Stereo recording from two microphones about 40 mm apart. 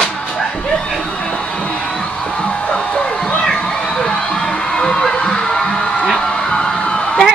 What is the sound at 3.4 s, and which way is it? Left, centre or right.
Music, centre.